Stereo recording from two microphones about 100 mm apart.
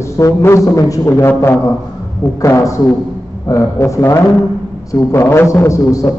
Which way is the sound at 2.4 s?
30° left (ahead or behind).